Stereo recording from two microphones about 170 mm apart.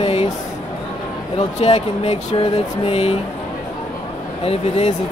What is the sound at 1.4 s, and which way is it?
Speech, 35° left (ahead or behind).